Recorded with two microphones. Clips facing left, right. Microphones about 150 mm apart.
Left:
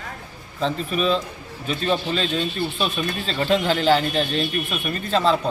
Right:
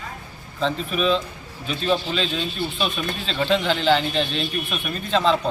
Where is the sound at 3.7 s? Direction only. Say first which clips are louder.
Left 1 dB; 45° left (ahead or behind).